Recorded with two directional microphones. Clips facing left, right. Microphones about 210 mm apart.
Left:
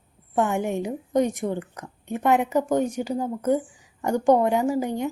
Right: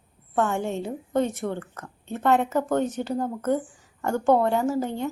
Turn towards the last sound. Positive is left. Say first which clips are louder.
# left 2 dB
turn(degrees=15)  # may be behind; listen again after turning